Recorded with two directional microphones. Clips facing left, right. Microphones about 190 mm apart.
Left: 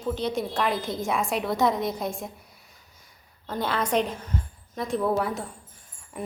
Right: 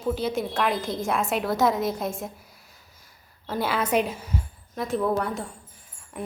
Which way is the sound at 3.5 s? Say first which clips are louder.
Right 1 dB; 5° right (ahead or behind).